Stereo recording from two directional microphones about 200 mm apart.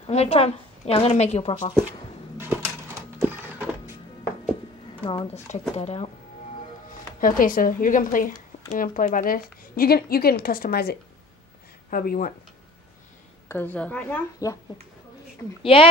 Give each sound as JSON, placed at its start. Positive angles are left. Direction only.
{"t": 0.0, "sound": "a woman's voice", "side_deg": 30}
{"t": 2.3, "sound": "bird", "side_deg": -10}
{"t": 5.0, "sound": "speech", "side_deg": 25}
{"t": 7.2, "sound": "speech", "side_deg": 45}
{"t": 13.5, "sound": "a woman's voice", "side_deg": 10}
{"t": 15.6, "sound": "speech", "side_deg": 25}